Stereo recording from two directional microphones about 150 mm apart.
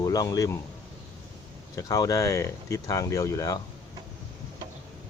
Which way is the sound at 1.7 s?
25° left (ahead or behind).